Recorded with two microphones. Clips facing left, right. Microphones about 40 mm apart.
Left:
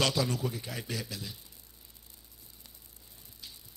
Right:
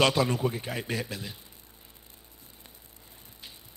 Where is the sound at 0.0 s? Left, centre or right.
Right.